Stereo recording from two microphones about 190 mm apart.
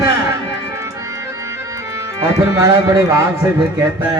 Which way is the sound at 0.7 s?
15° right (ahead or behind).